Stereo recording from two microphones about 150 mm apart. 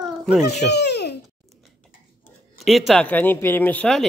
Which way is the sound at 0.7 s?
90° left.